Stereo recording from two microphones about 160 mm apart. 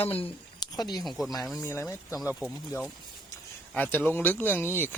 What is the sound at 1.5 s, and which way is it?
Speech, 15° left (ahead or behind).